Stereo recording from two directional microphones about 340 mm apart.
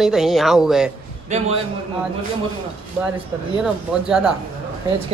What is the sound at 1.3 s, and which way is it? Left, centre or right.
Speech, centre.